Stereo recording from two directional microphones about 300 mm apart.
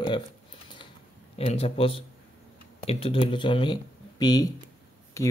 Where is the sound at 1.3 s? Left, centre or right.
Centre.